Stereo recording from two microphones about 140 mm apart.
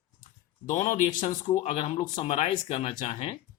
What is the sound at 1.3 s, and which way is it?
Speech, 30° left (ahead or behind).